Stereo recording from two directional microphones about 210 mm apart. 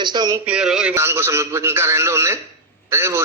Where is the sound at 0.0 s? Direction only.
20° right (ahead or behind).